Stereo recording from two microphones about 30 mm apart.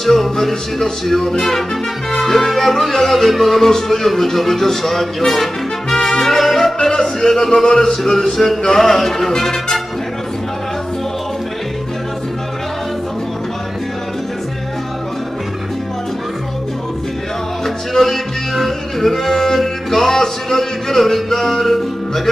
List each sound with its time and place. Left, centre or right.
0.0 s speech: centre
1.0 s music: centre
1.3 s speech: centre
2.1 s music: centre
3.6 s speech: centre
5.9 s brass instrument: left
6.2 s music: centre
6.8 s music: centre
7.8 s speech: centre
17.6 s music: centre